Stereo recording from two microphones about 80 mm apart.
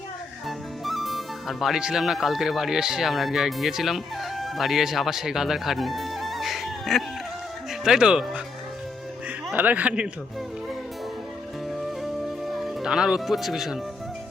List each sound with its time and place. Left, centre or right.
0.4 s speech: centre
9.6 s speech: centre
11.7 s music: centre